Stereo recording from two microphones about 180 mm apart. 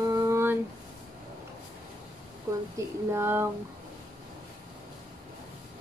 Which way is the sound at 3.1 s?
15° right (ahead or behind).